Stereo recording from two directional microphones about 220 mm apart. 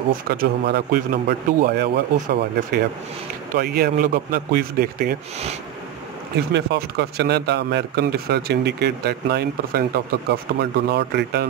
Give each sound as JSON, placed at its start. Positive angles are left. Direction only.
{"t": 0.1, "sound": "a man's voice", "side_deg": -45}
{"t": 3.5, "sound": "a man's voice", "side_deg": -45}
{"t": 6.3, "sound": "a man's voice", "side_deg": -50}